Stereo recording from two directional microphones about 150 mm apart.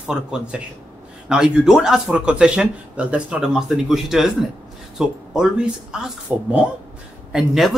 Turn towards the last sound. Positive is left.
turn(degrees=0)  # may be behind; listen again after turning